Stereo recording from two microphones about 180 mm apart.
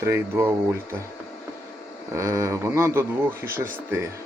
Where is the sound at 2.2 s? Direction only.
15° right (ahead or behind).